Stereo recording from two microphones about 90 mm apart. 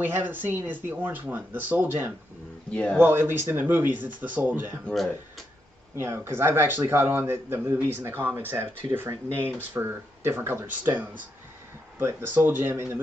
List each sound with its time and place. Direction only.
0.0 s speech: 20° right (ahead or behind)
2.7 s speech: 10° left (ahead or behind)
3.0 s speech: 25° right (ahead or behind)
5.9 s speech: 30° right (ahead or behind)
12.0 s speech: 30° right (ahead or behind)